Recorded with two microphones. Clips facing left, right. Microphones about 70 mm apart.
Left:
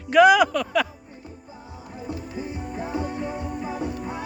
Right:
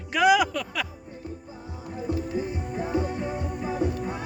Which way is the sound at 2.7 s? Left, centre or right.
Centre.